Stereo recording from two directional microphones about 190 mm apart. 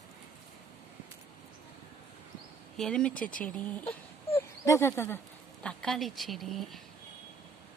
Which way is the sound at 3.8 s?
30° left (ahead or behind).